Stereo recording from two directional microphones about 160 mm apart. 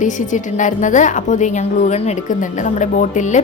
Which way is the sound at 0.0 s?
50° left (ahead or behind).